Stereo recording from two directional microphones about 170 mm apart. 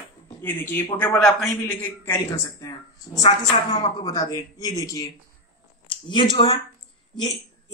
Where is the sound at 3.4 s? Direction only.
25° left (ahead or behind).